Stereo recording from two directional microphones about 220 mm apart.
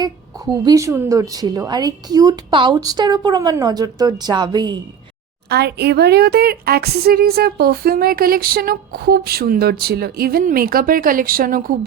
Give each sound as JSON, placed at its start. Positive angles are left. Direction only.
{"t": 0.6, "sound": "speech", "side_deg": -15}
{"t": 5.5, "sound": "speech", "side_deg": -50}